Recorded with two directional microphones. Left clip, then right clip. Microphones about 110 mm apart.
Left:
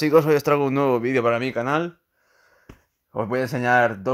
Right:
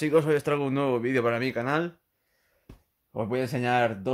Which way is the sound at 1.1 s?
20° left (ahead or behind).